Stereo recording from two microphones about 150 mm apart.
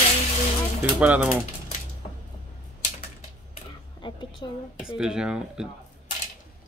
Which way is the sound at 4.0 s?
30° left (ahead or behind).